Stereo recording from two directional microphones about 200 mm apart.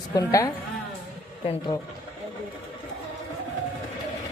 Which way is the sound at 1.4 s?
30° left (ahead or behind).